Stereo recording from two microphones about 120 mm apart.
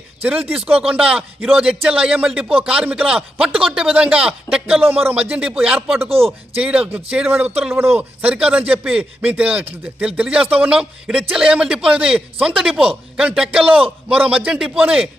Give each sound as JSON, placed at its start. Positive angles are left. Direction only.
{"t": 0.2, "sound": "speech", "side_deg": -15}
{"t": 6.1, "sound": "speech", "side_deg": -55}
{"t": 6.6, "sound": "speech", "side_deg": -10}